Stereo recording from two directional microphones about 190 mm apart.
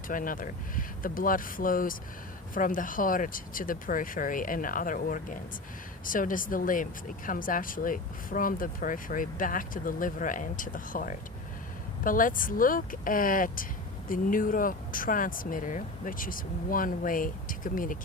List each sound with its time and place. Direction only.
0.1 s speech: 45° left (ahead or behind)